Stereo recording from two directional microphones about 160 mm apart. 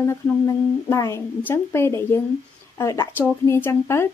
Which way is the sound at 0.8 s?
20° left (ahead or behind).